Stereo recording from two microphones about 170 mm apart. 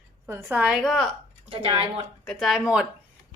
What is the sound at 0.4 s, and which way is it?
Speech, 5° right (ahead or behind).